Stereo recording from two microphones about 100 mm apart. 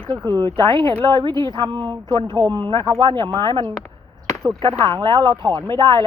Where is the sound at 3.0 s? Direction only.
50° right (ahead or behind).